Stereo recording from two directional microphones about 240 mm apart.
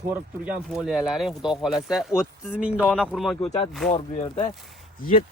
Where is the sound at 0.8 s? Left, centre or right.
Centre.